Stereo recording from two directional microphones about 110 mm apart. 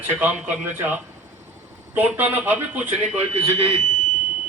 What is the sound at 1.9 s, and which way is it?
A man's voice, 15° right (ahead or behind).